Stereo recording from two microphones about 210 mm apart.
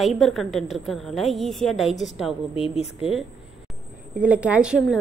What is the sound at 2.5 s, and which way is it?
Speech, 30° left (ahead or behind).